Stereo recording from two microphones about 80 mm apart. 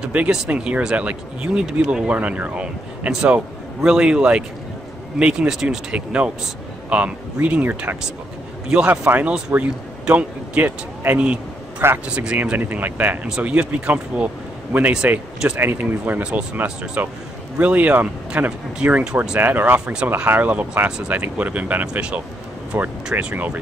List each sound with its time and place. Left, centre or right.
0.0 s speech: centre
9.0 s speech: right